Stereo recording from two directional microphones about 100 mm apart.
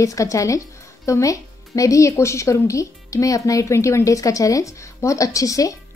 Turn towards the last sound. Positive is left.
turn(degrees=35)  # may be behind; listen again after turning